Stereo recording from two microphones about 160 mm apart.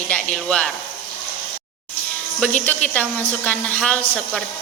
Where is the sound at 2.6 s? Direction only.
10° left (ahead or behind).